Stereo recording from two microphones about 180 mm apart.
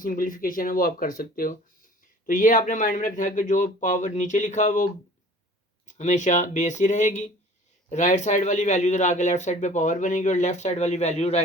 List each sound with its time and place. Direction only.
0.0 s speech: 50° left (ahead or behind)